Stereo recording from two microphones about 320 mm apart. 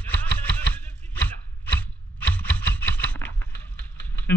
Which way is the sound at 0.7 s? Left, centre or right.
Centre.